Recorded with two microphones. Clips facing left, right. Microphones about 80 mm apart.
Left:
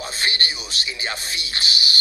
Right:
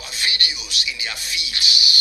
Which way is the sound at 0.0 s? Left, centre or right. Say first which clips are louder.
Left 2 dB; left.